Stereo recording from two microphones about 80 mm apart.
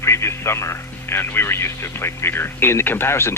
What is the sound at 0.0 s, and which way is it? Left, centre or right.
Speech, left.